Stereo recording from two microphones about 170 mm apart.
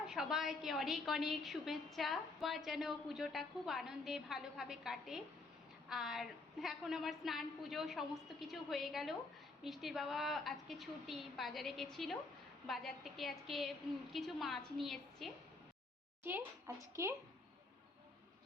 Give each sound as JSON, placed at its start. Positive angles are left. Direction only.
{"t": 0.1, "sound": "a woman's voice", "side_deg": -5}
{"t": 16.2, "sound": "speech", "side_deg": -10}